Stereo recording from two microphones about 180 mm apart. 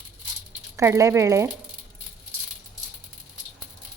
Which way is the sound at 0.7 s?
15° right (ahead or behind).